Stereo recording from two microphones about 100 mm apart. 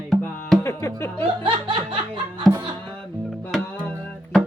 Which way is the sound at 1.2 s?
60° right (ahead or behind).